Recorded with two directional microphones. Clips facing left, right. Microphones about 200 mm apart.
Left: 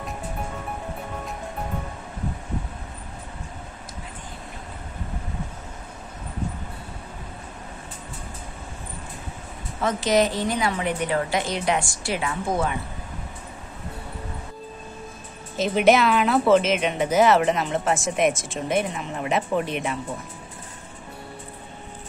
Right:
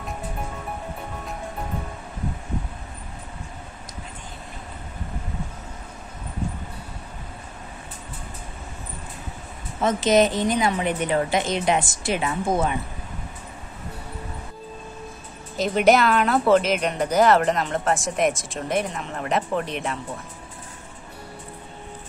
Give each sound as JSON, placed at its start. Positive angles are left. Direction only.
{"t": 9.8, "sound": "a woman's voice", "side_deg": -20}
{"t": 15.5, "sound": "speech", "side_deg": 0}